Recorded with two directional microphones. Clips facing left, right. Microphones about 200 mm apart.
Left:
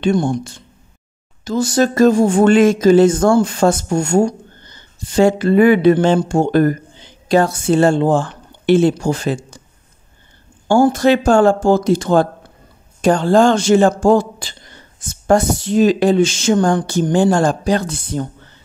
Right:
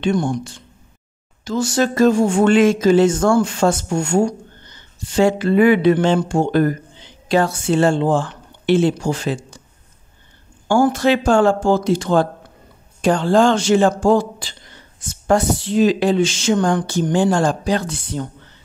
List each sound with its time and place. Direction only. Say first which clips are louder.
1.4 s speech: left 3 dB; 40° left (ahead or behind)
10.9 s speech: left 3 dB; 45° left (ahead or behind)